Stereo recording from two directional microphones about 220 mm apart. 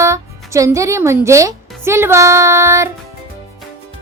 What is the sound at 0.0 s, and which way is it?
Speech, 15° right (ahead or behind).